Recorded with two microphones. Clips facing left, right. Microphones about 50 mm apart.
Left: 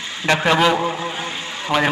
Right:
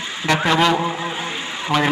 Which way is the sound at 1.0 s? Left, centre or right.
Centre.